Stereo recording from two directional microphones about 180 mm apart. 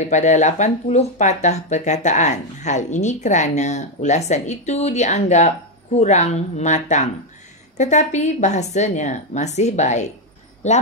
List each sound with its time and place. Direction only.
0.1 s speech: 40° left (ahead or behind)